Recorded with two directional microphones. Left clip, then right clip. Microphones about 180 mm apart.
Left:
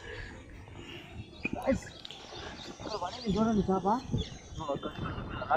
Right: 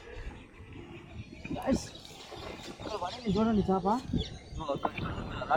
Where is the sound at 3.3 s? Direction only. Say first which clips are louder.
Right 1 dB; 15° left (ahead or behind); by 5.6 s centre (ahead or behind).